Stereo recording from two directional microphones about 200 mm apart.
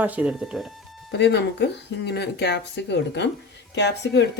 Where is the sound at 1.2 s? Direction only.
60° left (ahead or behind).